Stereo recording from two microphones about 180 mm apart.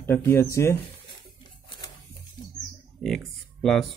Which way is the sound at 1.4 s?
25° left (ahead or behind).